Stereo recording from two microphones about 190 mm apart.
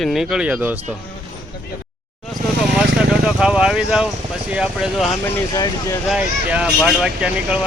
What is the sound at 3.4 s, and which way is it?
Speech, 5° right (ahead or behind).